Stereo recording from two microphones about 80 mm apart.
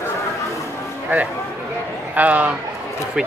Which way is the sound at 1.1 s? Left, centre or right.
Right.